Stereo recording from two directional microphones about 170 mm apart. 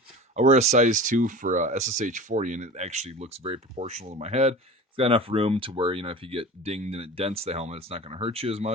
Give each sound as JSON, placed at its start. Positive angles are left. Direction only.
{"t": 0.3, "sound": "speech", "side_deg": -40}